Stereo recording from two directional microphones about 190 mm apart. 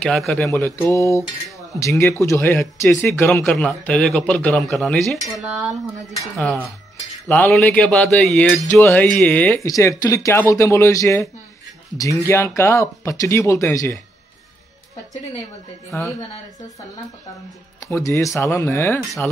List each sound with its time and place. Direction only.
0.0 s speech: centre (ahead or behind)
0.5 s speech: 10° left (ahead or behind)
17.8 s speech: 15° left (ahead or behind)